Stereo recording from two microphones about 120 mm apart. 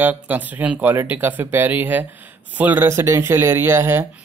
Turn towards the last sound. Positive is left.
turn(degrees=-20)  # may be behind; listen again after turning